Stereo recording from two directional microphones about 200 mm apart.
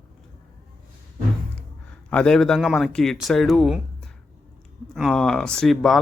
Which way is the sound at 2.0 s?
5° left (ahead or behind).